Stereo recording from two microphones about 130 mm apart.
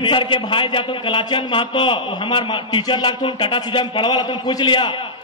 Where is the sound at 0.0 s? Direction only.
40° left (ahead or behind).